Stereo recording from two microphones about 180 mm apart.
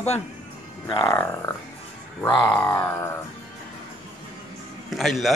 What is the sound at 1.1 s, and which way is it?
Speech, 15° left (ahead or behind).